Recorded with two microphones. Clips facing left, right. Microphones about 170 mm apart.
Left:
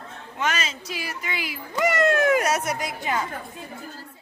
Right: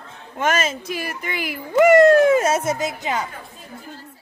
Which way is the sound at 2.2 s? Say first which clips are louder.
Right 5 dB; 25° right (ahead or behind).